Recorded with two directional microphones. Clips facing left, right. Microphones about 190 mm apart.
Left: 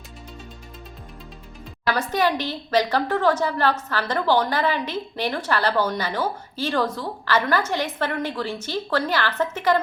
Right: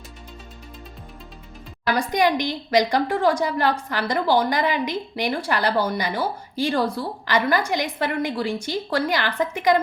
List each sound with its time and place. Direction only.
2.0 s a woman's voice: 15° right (ahead or behind)